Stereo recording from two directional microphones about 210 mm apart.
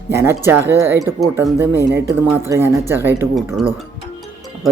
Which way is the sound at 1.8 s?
55° right (ahead or behind).